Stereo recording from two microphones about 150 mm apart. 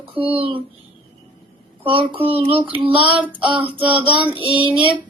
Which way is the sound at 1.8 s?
35° right (ahead or behind).